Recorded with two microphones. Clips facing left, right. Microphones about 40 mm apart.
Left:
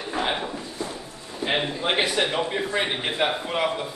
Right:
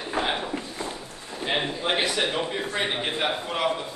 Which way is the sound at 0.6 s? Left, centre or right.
Right.